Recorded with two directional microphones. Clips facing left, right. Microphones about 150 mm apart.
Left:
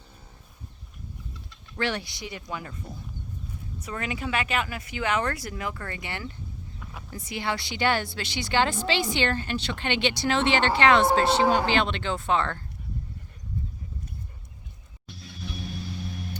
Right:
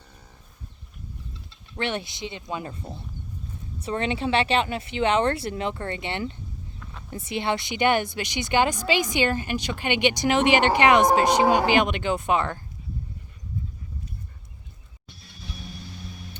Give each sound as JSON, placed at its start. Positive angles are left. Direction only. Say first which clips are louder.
{"t": 1.5, "sound": "a woman's voice", "louder": "even", "side_deg": -20}